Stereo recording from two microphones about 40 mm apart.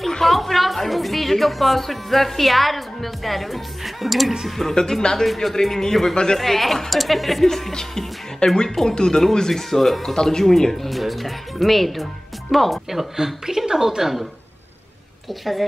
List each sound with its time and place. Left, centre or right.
0.2 s a woman's voice: centre
4.7 s music: centre
6.3 s speech: centre
7.4 s music: centre
10.1 s speech: centre
13.1 s speech: centre